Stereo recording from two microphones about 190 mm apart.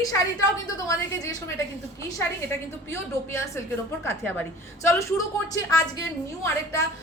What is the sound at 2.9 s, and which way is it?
Speech, 15° left (ahead or behind).